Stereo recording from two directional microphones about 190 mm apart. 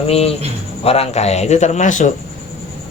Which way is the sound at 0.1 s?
30° left (ahead or behind).